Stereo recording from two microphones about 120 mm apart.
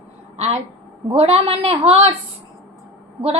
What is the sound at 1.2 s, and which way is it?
Speech, 55° right (ahead or behind).